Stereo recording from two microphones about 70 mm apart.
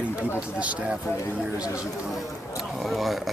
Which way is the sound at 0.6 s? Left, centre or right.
Centre.